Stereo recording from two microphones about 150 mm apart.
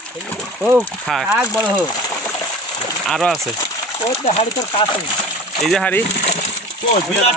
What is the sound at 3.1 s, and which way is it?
Speech, centre (ahead or behind).